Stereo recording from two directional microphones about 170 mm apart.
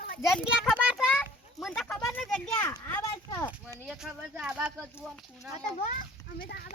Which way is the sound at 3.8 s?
Centre (ahead or behind).